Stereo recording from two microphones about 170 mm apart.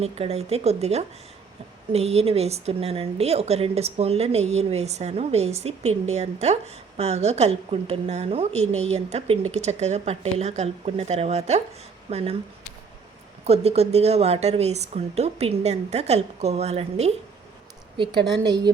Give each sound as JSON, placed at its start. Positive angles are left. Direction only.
{"t": 0.0, "sound": "a woman's voice", "side_deg": -40}
{"t": 13.4, "sound": "a woman's voice", "side_deg": -40}
{"t": 17.9, "sound": "a woman's voice", "side_deg": -30}